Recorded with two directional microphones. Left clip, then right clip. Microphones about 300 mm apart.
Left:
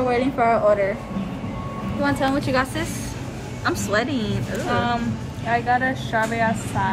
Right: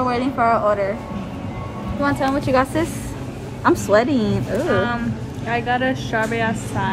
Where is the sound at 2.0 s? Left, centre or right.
Centre.